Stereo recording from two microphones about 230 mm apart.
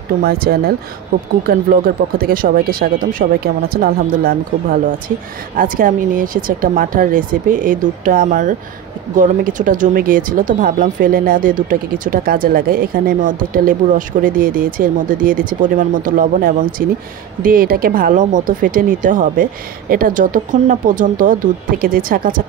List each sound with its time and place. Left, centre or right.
0.2 s speech: right